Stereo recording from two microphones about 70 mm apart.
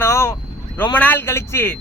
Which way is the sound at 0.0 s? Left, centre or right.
Left.